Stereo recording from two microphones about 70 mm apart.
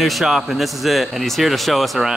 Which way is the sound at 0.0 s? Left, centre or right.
Centre.